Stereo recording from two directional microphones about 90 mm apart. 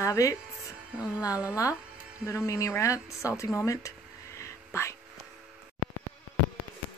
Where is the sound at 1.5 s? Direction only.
40° left (ahead or behind).